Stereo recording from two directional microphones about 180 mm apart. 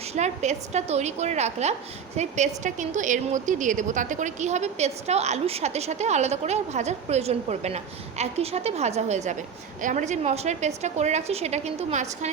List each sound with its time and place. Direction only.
0.1 s a woman's voice: 40° right (ahead or behind)